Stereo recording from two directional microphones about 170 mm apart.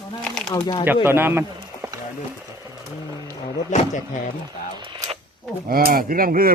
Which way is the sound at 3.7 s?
45° left (ahead or behind).